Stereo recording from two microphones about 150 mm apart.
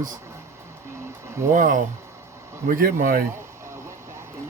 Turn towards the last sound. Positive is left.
turn(degrees=-65)  # may be behind; listen again after turning